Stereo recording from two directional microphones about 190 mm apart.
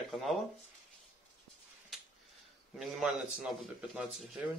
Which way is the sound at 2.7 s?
5° right (ahead or behind).